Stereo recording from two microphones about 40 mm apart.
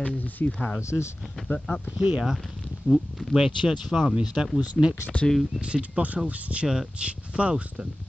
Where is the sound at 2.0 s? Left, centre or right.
Right.